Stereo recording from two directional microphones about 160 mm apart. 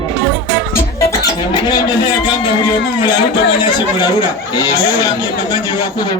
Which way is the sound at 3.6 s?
25° left (ahead or behind).